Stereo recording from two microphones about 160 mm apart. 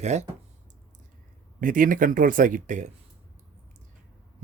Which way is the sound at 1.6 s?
60° right (ahead or behind).